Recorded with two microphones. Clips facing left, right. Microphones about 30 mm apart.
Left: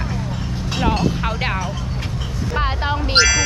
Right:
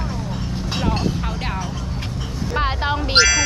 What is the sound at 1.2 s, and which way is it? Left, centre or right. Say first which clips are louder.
Speech: left 5 dB; left.